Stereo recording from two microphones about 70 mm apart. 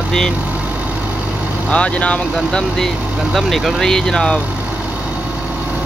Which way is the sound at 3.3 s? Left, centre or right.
Centre.